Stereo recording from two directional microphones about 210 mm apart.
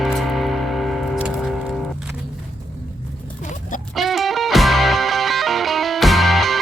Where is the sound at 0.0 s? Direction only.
Centre (ahead or behind).